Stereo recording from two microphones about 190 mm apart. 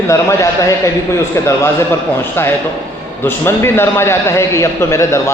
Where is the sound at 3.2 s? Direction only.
10° left (ahead or behind).